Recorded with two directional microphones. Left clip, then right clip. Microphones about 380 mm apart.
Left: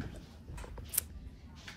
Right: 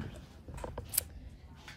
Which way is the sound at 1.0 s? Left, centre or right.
Centre.